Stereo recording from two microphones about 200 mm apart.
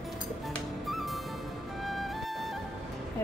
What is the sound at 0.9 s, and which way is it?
Music, centre (ahead or behind).